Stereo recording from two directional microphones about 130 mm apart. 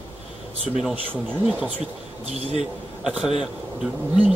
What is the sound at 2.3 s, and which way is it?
Speech, 55° right (ahead or behind).